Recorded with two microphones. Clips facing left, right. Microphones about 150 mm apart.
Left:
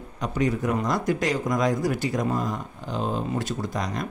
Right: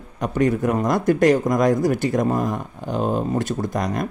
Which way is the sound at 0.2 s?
55° right (ahead or behind).